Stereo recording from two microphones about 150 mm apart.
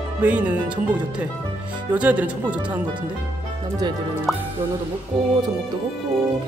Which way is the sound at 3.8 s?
30° right (ahead or behind).